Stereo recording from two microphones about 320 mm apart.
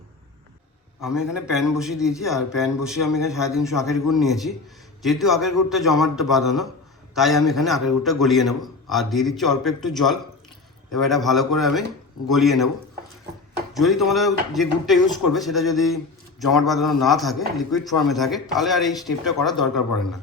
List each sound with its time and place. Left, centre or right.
1.0 s a man's voice: centre
13.7 s a man's voice: centre